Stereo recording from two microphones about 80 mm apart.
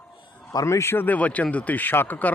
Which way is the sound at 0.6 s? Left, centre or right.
Left.